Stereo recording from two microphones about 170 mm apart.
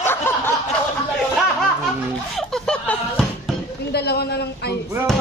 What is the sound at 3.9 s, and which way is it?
Speech, 75° left (ahead or behind).